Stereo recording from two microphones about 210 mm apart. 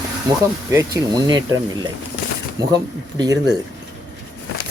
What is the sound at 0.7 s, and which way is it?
Speech, 15° right (ahead or behind).